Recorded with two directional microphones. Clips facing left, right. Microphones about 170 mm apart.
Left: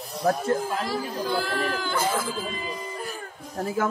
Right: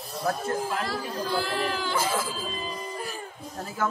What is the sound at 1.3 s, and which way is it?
Speech, 5° right (ahead or behind).